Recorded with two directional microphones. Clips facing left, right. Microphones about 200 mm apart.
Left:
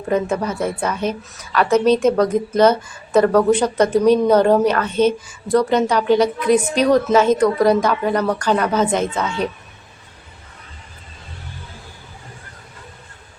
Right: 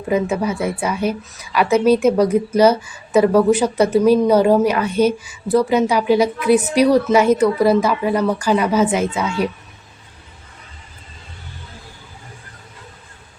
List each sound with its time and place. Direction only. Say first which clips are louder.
0.1 s a woman's voice: right 1 dB; 10° right (ahead or behind)